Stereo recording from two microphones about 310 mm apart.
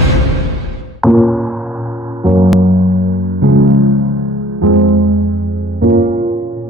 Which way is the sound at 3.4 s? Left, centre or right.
Right.